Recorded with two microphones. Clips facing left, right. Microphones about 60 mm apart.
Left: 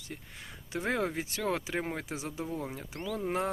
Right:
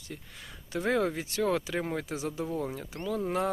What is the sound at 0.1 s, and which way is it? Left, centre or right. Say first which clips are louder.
Speech: right 1 dB; left.